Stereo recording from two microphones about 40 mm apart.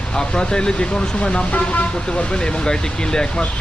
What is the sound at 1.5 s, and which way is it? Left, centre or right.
Speech, left.